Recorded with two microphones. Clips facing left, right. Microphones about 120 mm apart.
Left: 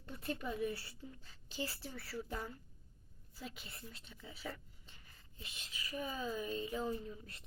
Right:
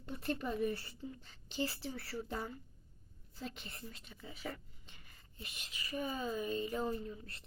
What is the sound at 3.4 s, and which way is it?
Speech, 5° left (ahead or behind).